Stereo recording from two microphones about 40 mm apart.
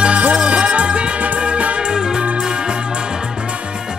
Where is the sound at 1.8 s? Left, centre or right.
Centre.